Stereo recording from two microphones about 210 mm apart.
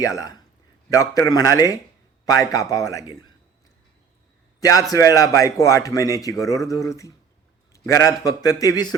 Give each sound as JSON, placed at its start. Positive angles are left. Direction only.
{"t": 0.0, "sound": "a man's voice", "side_deg": 15}
{"t": 4.6, "sound": "a man's voice", "side_deg": 15}